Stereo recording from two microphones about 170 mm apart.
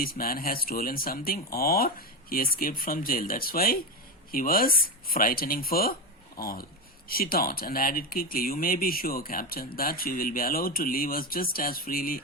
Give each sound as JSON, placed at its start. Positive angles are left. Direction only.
{"t": 0.0, "sound": "speech", "side_deg": 60}